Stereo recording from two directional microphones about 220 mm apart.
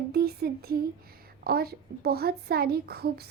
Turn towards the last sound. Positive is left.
turn(degrees=-45)  # may be behind; listen again after turning